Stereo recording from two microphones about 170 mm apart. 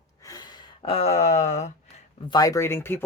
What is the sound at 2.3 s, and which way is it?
Speech, 20° left (ahead or behind).